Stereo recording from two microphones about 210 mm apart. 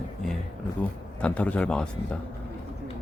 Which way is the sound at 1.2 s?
5° left (ahead or behind).